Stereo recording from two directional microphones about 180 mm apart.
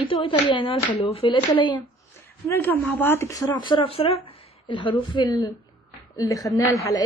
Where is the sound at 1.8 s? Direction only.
15° left (ahead or behind).